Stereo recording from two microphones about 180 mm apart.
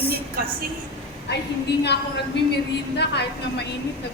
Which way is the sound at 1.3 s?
70° left (ahead or behind).